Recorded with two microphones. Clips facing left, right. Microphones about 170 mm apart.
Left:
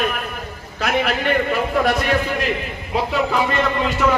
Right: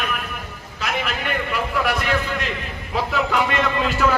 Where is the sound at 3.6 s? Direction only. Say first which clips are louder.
Left 1 dB; centre (ahead or behind).